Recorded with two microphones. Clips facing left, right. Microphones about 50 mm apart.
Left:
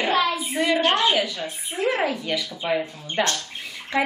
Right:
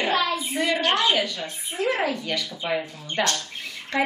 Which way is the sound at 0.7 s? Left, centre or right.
Left.